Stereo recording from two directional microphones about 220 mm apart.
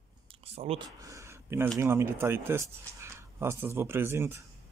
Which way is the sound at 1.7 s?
10° right (ahead or behind).